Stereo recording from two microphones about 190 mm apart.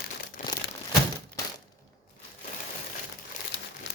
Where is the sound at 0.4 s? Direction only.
40° left (ahead or behind).